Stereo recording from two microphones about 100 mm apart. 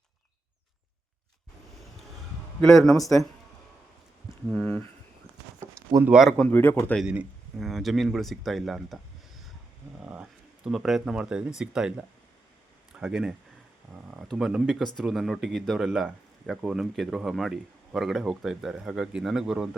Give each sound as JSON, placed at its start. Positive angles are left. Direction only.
{"t": 2.6, "sound": "speech", "side_deg": 5}
{"t": 4.5, "sound": "a sound", "side_deg": 5}
{"t": 5.5, "sound": "a sound", "side_deg": -30}
{"t": 6.1, "sound": "speech", "side_deg": -5}
{"t": 6.5, "sound": "a man's voice", "side_deg": 20}
{"t": 7.0, "sound": "speech", "side_deg": -10}
{"t": 7.6, "sound": "speech", "side_deg": 0}
{"t": 10.0, "sound": "speech", "side_deg": -10}